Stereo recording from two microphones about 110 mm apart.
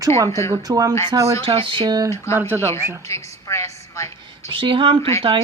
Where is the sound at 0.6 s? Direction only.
35° right (ahead or behind).